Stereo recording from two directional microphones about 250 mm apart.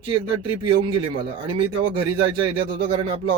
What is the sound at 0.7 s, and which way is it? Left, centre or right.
Speech, centre.